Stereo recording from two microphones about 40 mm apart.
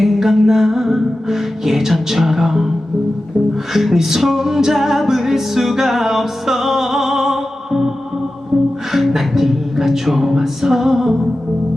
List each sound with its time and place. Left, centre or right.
0.0 s music: centre
3.7 s music: centre